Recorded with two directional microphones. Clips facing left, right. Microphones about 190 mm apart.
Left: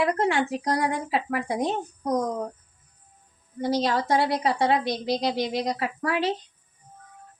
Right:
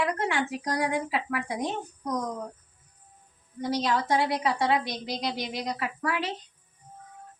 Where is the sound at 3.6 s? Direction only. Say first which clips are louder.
Left 3 dB; 30° left (ahead or behind).